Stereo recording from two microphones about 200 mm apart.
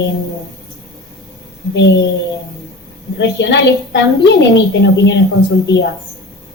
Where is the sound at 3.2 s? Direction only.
60° left (ahead or behind).